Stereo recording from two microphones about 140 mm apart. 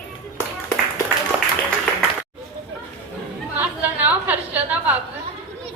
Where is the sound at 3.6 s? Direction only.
10° right (ahead or behind).